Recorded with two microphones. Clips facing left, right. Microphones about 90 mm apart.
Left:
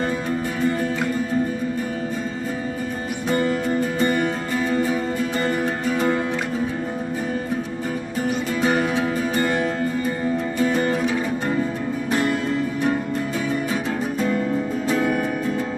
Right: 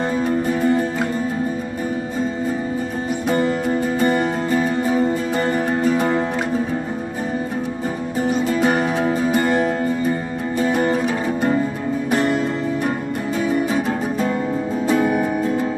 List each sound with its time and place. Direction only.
3.6 s music: 10° right (ahead or behind)
4.2 s music: 30° right (ahead or behind)
5.0 s music: 20° right (ahead or behind)
8.5 s music: 10° right (ahead or behind)
10.6 s music: 15° right (ahead or behind)
14.9 s music: 10° right (ahead or behind)